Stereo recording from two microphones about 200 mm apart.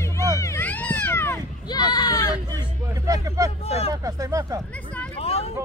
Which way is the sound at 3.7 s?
30° left (ahead or behind).